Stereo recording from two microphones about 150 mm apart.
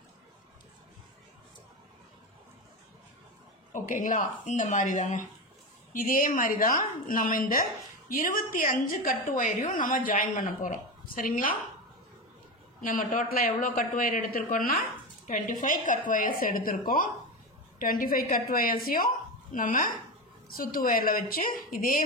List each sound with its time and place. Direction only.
3.7 s a woman's voice: 60° left (ahead or behind)
12.8 s a man's voice: 60° left (ahead or behind)
15.2 s a woman's voice: 60° left (ahead or behind)
19.5 s a woman's voice: 60° left (ahead or behind)